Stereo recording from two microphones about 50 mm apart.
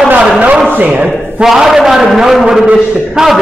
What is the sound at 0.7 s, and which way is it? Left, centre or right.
Speech, right.